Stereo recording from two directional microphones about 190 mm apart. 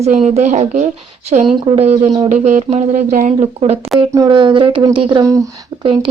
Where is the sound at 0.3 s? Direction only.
40° right (ahead or behind).